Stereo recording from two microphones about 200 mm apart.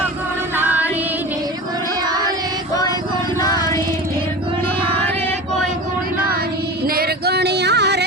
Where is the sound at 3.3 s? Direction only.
20° left (ahead or behind).